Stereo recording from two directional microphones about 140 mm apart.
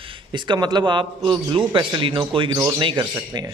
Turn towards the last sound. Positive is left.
turn(degrees=-30)  # may be behind; listen again after turning